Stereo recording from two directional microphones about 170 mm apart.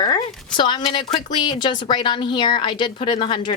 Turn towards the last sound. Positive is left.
turn(degrees=30)  # may be behind; listen again after turning